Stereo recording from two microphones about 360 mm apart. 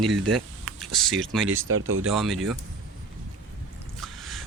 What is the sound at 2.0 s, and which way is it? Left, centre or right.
Speech, centre.